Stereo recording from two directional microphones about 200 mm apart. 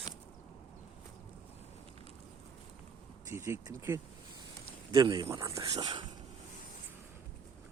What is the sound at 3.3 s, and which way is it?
Speech, 15° right (ahead or behind).